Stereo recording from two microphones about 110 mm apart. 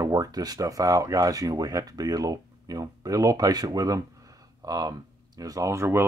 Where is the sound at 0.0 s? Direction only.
35° right (ahead or behind).